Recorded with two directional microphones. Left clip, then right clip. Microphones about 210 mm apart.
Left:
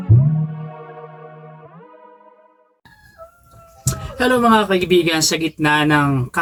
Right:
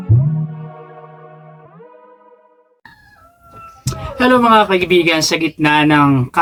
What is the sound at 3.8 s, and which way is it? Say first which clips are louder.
Speech: right 4 dB; 15° right (ahead or behind).